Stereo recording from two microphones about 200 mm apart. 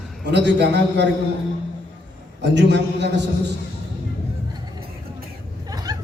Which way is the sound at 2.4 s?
60° right (ahead or behind).